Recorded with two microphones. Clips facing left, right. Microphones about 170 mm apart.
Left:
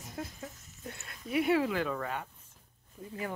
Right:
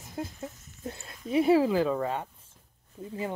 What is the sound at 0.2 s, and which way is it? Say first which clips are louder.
Speech: right 5 dB; 30° right (ahead or behind).